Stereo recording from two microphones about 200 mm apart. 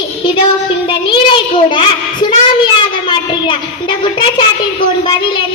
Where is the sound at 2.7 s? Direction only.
25° left (ahead or behind).